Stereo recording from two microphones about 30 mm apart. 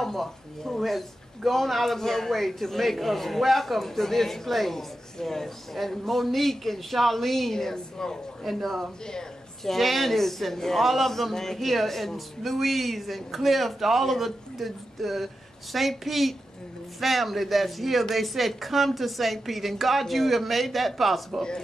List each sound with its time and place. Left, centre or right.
0.0 s a man's voice: centre
7.5 s a woman's voice: centre
8.5 s a man's voice: centre
9.7 s a man's voice: centre